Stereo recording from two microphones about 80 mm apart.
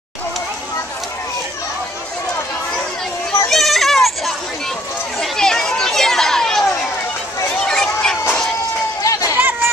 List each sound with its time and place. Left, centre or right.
3.4 s children playing: centre
5.2 s chatter: centre
7.5 s a sound: centre
9.0 s chatter: left